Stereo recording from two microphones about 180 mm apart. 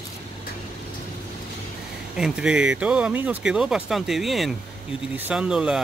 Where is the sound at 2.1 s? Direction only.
5° right (ahead or behind).